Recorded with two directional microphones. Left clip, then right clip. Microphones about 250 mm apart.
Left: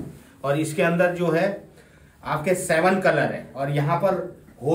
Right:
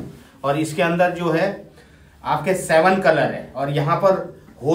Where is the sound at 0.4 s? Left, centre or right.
Centre.